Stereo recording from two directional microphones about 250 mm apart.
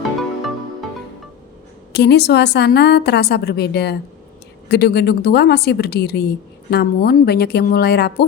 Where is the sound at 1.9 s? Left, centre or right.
Left.